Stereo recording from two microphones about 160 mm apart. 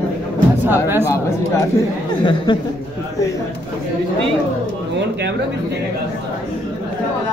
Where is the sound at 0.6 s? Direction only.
15° right (ahead or behind).